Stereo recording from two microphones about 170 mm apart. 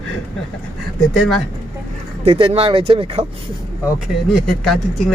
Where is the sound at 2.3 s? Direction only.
35° right (ahead or behind).